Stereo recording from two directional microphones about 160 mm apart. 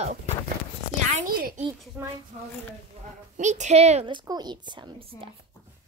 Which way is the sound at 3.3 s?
50° right (ahead or behind).